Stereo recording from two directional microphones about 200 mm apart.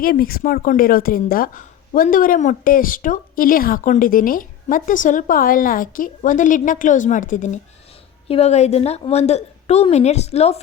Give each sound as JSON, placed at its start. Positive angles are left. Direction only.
{"t": 0.0, "sound": "a woman's voice", "side_deg": 45}